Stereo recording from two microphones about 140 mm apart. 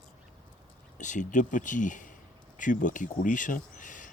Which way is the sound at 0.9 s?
60° left (ahead or behind).